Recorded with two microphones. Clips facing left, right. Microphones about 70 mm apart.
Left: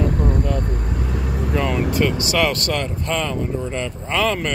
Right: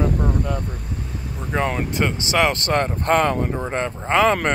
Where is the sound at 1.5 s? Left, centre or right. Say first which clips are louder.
Left 1 dB; right.